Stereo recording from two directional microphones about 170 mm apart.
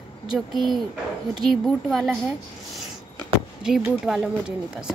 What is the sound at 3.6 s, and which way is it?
Speech, 5° right (ahead or behind).